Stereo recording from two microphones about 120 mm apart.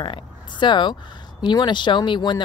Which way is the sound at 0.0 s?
40° left (ahead or behind).